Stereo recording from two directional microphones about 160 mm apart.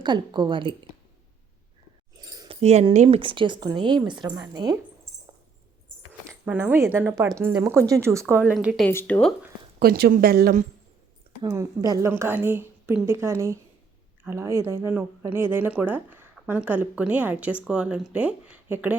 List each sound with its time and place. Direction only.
0.0 s speech: 25° right (ahead or behind)
2.2 s keys jangling: 25° right (ahead or behind)
2.5 s keys jangling: 40° right (ahead or behind)
2.9 s speech: 45° right (ahead or behind)
3.2 s speech: 30° right (ahead or behind)
6.2 s speech: 10° right (ahead or behind)
8.4 s speech: 5° right (ahead or behind)
8.9 s speech: 15° left (ahead or behind)
9.8 s speech: 65° right (ahead or behind)
11.4 s speech: 20° right (ahead or behind)